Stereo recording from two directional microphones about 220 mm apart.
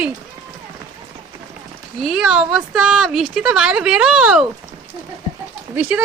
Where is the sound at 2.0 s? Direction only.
Centre (ahead or behind).